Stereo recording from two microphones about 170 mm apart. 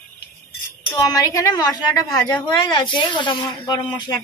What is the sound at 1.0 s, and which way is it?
Speech, 20° left (ahead or behind).